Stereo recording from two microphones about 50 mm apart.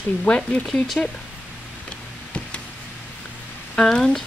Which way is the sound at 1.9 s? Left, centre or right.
Left.